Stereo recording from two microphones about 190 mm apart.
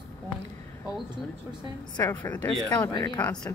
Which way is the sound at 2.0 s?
10° left (ahead or behind).